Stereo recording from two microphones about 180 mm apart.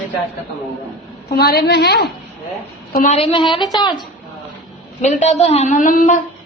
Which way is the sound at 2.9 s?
45° left (ahead or behind).